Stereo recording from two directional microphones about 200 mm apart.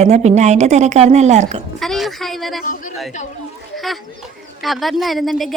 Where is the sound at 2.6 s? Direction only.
40° left (ahead or behind).